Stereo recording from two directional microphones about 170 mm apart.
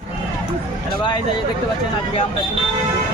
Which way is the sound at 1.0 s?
25° left (ahead or behind).